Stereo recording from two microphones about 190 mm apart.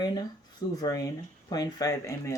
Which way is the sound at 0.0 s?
20° left (ahead or behind).